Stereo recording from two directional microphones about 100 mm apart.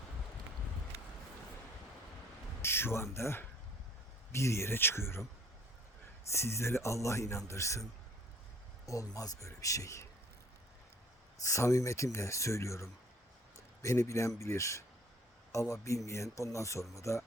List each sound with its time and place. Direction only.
2.6 s speech: 25° left (ahead or behind)
6.3 s speech: 25° left (ahead or behind)
8.9 s speech: 35° left (ahead or behind)
11.4 s speech: 30° left (ahead or behind)
14.1 s speech: 30° left (ahead or behind)